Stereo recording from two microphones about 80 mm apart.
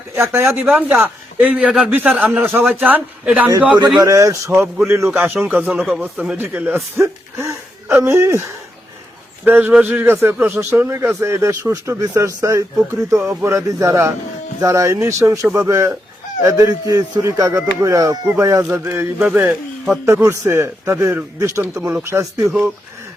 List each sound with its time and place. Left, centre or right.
0.2 s a man's voice: right
0.6 s a man's voice: centre
4.0 s a man's voice: right
5.2 s a man's voice: right
6.9 s speech: right
9.4 s a man's voice: right
16.6 s a man's voice: right
19.2 s speech: centre
20.4 s a man's voice: right
22.0 s a man's voice: right